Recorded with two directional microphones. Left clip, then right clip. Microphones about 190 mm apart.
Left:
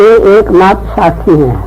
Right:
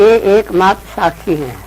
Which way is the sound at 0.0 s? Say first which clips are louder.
Left 5 dB; 20° left (ahead or behind).